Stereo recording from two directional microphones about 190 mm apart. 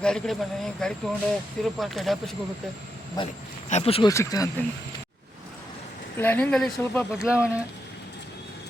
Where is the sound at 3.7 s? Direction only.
30° left (ahead or behind).